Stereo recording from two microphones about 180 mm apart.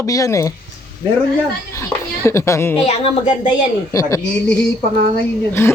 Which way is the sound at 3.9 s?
20° left (ahead or behind).